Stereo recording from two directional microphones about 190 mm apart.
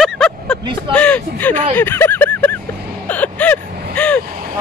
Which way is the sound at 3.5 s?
45° right (ahead or behind).